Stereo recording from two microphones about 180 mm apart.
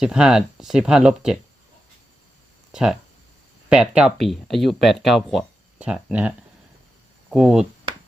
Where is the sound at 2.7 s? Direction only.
5° right (ahead or behind).